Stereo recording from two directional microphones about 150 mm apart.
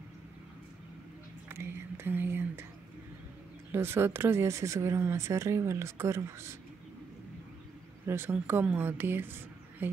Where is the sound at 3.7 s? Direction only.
15° right (ahead or behind).